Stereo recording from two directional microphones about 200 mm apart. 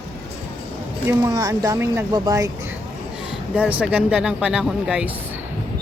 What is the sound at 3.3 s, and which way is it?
Speech, 5° right (ahead or behind).